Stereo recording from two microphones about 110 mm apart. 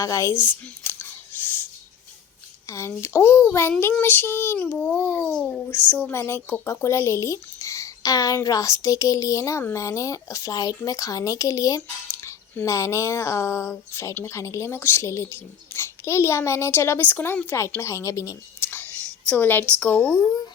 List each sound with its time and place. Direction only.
0.0 s speech: 30° left (ahead or behind)
0.9 s whispering: 20° left (ahead or behind)
2.6 s speech: 25° left (ahead or behind)
3.9 s child singing: 20° left (ahead or behind)
5.4 s speech: 20° left (ahead or behind)
19.3 s child singing: 15° left (ahead or behind)